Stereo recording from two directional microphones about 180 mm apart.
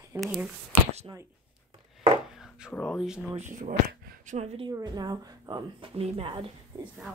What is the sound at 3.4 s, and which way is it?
Speech, 45° right (ahead or behind).